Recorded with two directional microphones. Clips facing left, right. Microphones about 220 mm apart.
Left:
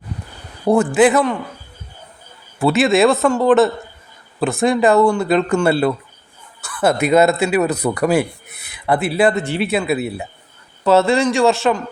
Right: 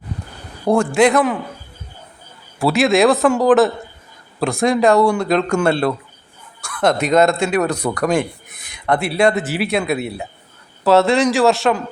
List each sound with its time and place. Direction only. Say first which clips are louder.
0.7 s speech: left 1 dB; 5° left (ahead or behind)
2.6 s speech: left 1 dB; centre (ahead or behind)